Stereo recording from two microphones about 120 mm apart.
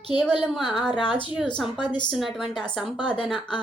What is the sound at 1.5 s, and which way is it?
Speech, 5° left (ahead or behind).